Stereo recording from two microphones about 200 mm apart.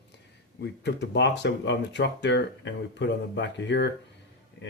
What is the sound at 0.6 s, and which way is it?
Speech, 60° left (ahead or behind).